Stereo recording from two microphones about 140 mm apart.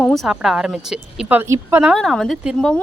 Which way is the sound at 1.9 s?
Centre (ahead or behind).